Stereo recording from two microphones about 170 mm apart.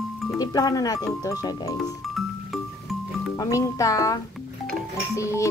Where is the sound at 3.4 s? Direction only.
20° left (ahead or behind).